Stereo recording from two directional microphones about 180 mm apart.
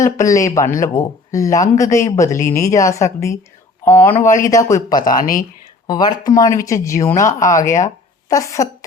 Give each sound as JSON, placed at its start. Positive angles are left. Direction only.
{"t": 0.2, "sound": "speech", "side_deg": 15}
{"t": 5.0, "sound": "speech", "side_deg": 50}
{"t": 5.9, "sound": "speech", "side_deg": 20}